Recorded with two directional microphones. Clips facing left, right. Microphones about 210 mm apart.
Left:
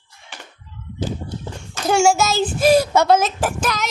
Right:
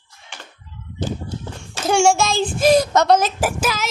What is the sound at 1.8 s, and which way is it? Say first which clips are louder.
A child's voice: even; centre (ahead or behind).